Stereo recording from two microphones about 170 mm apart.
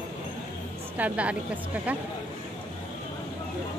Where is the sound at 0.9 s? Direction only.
10° right (ahead or behind).